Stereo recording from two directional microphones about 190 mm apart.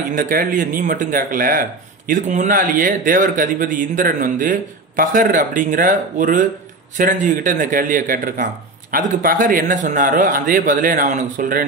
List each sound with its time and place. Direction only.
0.1 s speech: 45° right (ahead or behind)